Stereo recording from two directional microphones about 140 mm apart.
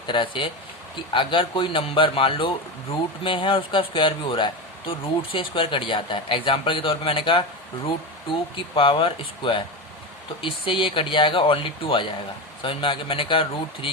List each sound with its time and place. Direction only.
0.1 s speech: 35° left (ahead or behind)
8.5 s speech: 40° left (ahead or behind)